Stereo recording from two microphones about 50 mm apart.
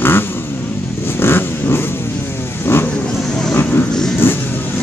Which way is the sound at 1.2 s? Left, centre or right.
Left.